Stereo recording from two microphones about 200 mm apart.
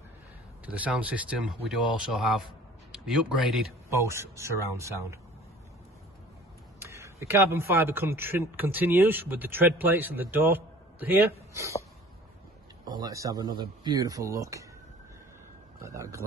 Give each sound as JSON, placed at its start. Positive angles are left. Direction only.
{"t": 0.7, "sound": "a man's voice", "side_deg": -5}
{"t": 3.9, "sound": "a man's voice", "side_deg": -15}
{"t": 6.8, "sound": "a man's voice", "side_deg": -15}
{"t": 12.8, "sound": "a man's voice", "side_deg": -20}
{"t": 15.8, "sound": "a man's voice", "side_deg": -15}